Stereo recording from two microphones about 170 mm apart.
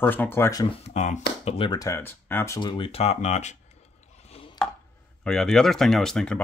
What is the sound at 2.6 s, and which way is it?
Speech, 30° left (ahead or behind).